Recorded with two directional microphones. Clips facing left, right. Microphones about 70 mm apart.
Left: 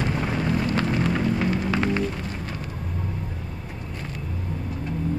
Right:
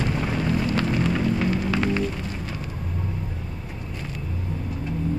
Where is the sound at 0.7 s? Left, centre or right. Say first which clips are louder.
Even; left.